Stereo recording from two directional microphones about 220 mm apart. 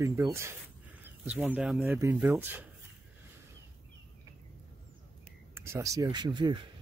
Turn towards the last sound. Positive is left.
turn(degrees=-20)  # may be behind; listen again after turning